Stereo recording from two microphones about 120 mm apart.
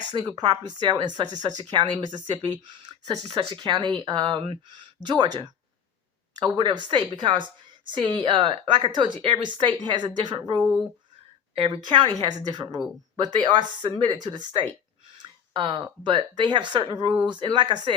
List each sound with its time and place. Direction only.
0.0 s a woman's voice: 40° right (ahead or behind)
15.5 s speech: 40° right (ahead or behind)